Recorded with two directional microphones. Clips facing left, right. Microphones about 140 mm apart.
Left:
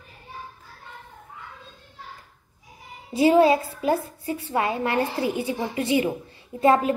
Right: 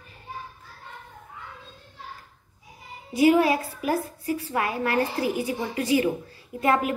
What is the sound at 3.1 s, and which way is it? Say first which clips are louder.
A child's voice: left 2 dB; 25° left (ahead or behind).